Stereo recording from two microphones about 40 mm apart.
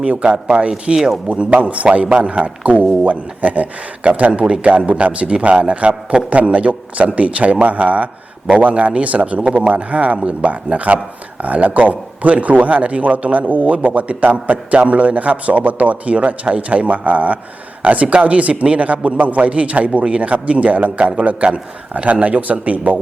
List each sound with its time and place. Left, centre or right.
0.0 s a man's voice: right
0.9 s speech: centre
1.3 s a man's voice: right
4.3 s a man's voice: right